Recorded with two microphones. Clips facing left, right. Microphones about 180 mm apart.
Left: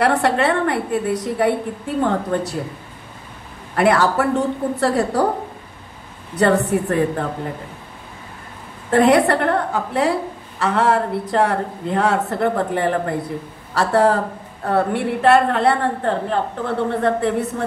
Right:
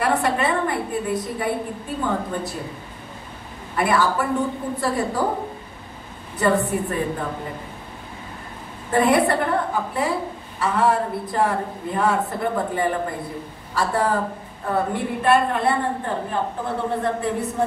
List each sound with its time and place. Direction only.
0.2 s a woman's voice: 80° left
3.7 s a woman's voice: 75° left (ahead or behind)
6.3 s a woman's voice: 85° left
8.9 s a woman's voice: 80° left
13.7 s a woman's voice: 80° left